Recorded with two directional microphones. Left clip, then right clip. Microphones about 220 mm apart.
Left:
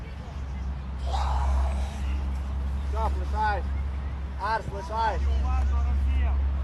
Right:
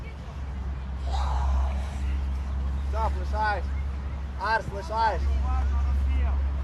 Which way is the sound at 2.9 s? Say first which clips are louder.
Right 1 dB; 40° right (ahead or behind).